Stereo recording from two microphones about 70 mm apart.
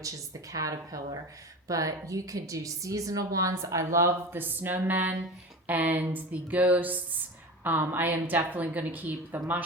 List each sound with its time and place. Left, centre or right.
0.5 s a woman's voice: right
3.5 s a woman's voice: right
4.3 s a woman's voice: right